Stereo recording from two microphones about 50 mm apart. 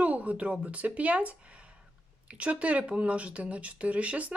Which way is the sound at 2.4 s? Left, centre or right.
Right.